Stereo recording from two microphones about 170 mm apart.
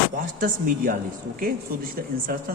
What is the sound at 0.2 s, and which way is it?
Speech, 55° right (ahead or behind).